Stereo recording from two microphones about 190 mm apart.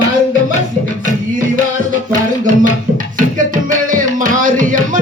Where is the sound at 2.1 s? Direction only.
45° right (ahead or behind).